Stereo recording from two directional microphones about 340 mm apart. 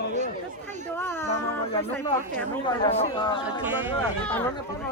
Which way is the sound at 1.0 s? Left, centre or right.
Centre.